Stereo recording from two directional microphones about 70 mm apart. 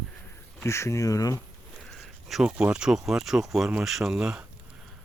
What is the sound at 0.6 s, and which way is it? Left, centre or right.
Speech, left.